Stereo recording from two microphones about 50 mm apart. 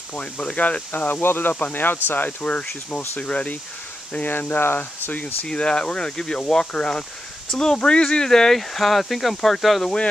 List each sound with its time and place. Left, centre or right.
0.1 s speech: left
1.5 s speech: left
5.2 s speech: left; by 9.8 s centre